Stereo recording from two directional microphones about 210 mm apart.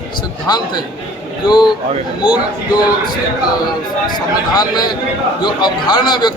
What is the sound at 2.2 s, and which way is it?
Speech, 5° right (ahead or behind).